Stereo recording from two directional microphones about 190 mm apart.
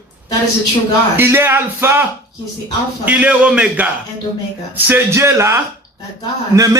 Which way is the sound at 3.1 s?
5° right (ahead or behind).